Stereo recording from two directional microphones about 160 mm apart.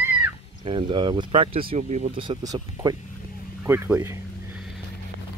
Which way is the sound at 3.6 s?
15° right (ahead or behind).